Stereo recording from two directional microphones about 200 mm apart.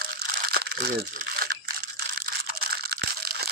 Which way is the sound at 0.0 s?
50° right (ahead or behind).